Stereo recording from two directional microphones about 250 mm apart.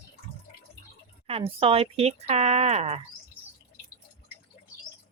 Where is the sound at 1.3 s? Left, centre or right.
Right.